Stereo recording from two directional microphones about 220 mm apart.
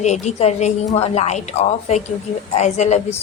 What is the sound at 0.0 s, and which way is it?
A woman's voice, 30° left (ahead or behind).